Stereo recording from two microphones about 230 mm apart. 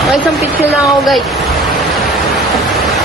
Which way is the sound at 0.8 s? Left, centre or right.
Centre.